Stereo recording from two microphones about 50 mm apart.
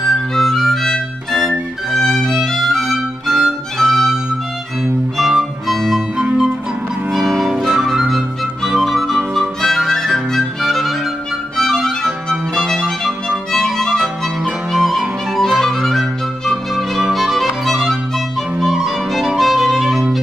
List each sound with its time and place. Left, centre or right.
0.0 s music: centre
6.1 s music: centre
7.1 s music: centre
7.5 s music: centre
12.0 s violin: centre
12.7 s music: centre
18.6 s violin: centre